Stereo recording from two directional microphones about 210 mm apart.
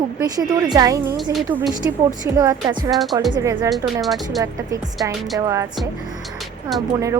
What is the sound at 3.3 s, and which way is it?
Speech, 20° right (ahead or behind).